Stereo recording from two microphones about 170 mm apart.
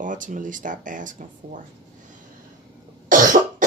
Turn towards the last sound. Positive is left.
turn(degrees=-50)  # may be behind; listen again after turning